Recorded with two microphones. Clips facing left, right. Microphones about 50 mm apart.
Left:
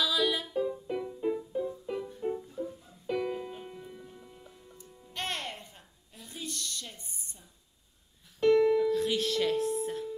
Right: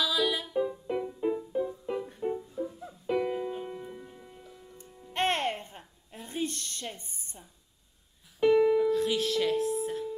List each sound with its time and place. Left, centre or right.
0.0 s music: centre
0.6 s music: centre
5.1 s a sound: right
8.4 s music: centre